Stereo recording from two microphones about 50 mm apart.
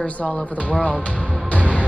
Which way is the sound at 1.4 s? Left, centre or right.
Left.